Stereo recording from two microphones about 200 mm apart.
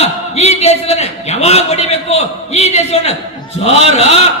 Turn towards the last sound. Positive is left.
turn(degrees=30)  # may be behind; listen again after turning